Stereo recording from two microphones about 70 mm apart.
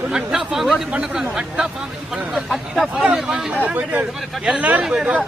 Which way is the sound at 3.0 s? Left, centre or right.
Centre.